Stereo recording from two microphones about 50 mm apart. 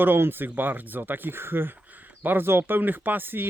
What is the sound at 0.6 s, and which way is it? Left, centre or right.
Speech, right.